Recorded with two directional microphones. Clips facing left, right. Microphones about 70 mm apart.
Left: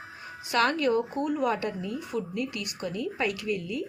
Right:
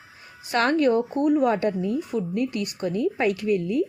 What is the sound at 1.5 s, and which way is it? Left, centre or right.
Speech, right.